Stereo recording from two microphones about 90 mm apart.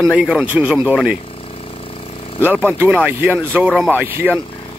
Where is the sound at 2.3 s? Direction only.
20° right (ahead or behind).